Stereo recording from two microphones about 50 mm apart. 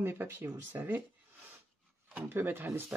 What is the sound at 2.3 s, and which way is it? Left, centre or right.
Speech, right.